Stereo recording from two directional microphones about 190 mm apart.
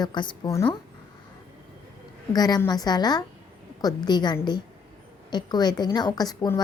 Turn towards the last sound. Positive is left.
turn(degrees=20)  # may be behind; listen again after turning